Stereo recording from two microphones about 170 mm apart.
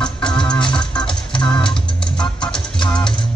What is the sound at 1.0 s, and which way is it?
Organ, 30° left (ahead or behind).